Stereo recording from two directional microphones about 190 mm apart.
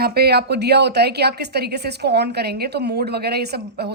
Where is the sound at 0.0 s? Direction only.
55° right (ahead or behind).